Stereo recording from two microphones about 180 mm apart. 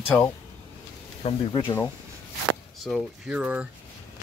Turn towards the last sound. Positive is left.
turn(degrees=-5)  # may be behind; listen again after turning